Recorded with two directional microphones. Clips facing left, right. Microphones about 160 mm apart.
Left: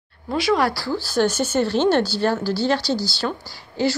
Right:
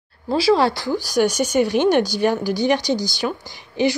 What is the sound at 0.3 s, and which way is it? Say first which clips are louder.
Speech: right 3 dB; 30° right (ahead or behind).